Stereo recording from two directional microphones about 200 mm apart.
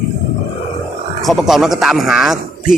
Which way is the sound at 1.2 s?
Centre (ahead or behind).